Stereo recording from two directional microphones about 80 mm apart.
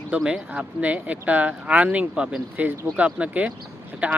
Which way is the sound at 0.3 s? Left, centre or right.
Centre.